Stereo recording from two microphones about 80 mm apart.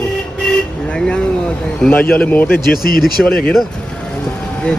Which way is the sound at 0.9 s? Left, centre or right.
Centre.